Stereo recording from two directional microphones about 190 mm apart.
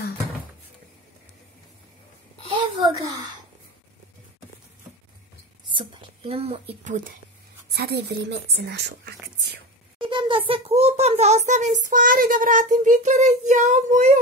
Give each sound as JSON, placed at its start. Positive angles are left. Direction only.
{"t": 2.5, "sound": "a sound", "side_deg": -20}
{"t": 5.7, "sound": "speech", "side_deg": -25}
{"t": 7.7, "sound": "speech", "side_deg": -55}
{"t": 9.9, "sound": "a child's voice", "side_deg": -25}